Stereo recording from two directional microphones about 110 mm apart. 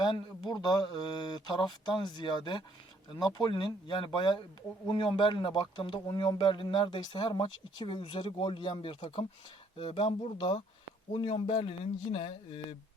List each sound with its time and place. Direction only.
0.0 s a man's voice: 45° left (ahead or behind)